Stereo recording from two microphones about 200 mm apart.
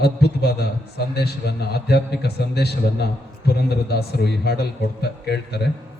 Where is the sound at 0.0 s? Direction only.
55° left (ahead or behind).